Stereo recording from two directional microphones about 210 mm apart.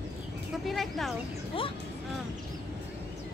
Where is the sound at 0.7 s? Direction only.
Centre (ahead or behind).